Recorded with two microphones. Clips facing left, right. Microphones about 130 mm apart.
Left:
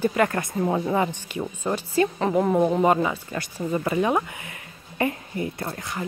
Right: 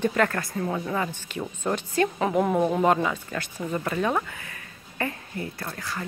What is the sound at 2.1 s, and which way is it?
Speech, 5° right (ahead or behind).